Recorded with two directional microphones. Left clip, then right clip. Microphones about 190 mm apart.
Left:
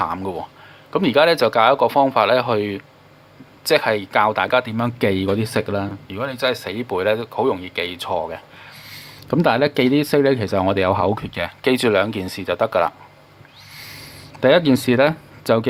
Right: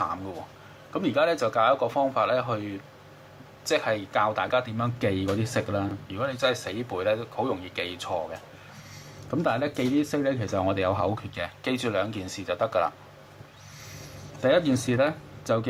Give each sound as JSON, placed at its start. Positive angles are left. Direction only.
{"t": 0.0, "sound": "speech", "side_deg": 45}
{"t": 14.4, "sound": "speech", "side_deg": 45}